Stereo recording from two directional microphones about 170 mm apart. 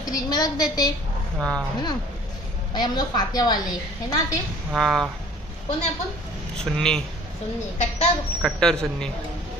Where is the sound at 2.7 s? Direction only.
25° left (ahead or behind).